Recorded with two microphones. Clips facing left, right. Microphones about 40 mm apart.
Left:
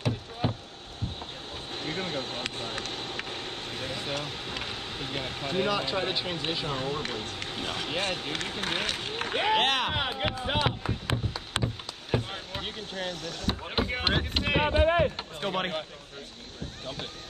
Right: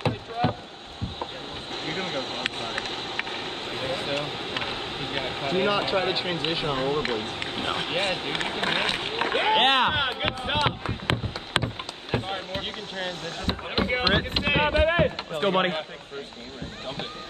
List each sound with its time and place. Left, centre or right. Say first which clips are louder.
0.0 s rowboat: right 5 dB; right
1.9 s vehicle: right 3 dB; right
13.5 s rowboat: right 4 dB; right
14.9 s run: right 2 dB; right
15.4 s speech: right 7 dB; right